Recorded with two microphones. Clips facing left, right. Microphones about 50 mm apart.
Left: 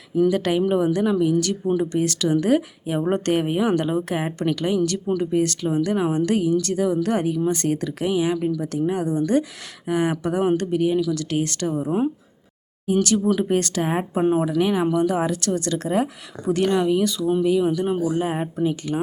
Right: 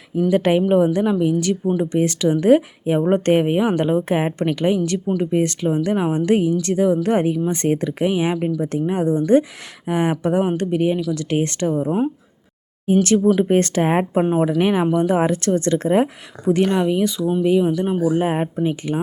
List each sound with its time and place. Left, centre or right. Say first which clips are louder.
0.2 s speech: right 2 dB; centre
12.9 s speech: right 4 dB; right
13.2 s speech: right 5 dB; centre
13.6 s speech: right 5 dB; right
17.7 s speech: right 3 dB; centre
18.2 s speech: right 3 dB; right